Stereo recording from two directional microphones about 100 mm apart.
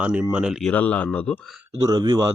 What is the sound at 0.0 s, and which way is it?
Speech, 10° right (ahead or behind).